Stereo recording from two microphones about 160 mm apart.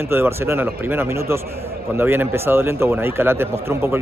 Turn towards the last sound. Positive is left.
turn(degrees=-15)  # may be behind; listen again after turning